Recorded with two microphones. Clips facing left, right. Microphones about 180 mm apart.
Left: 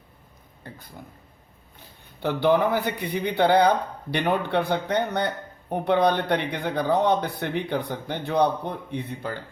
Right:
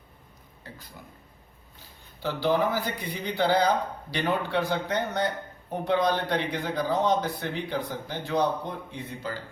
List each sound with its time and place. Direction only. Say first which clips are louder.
1.0 s speech: left 4 dB; 45° left (ahead or behind)
2.2 s speech: left 4 dB; 60° left (ahead or behind)